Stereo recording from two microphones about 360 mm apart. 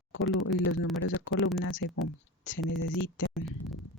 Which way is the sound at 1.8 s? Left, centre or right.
Left.